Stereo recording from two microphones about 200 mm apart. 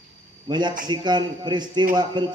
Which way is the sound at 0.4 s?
20° right (ahead or behind).